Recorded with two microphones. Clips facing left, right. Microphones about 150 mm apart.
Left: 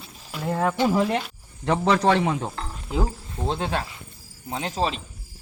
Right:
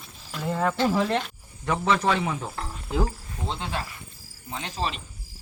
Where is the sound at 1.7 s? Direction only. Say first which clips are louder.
Left 4 dB; 35° left (ahead or behind).